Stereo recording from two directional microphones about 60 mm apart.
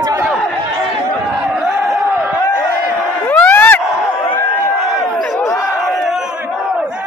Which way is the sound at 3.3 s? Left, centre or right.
Left.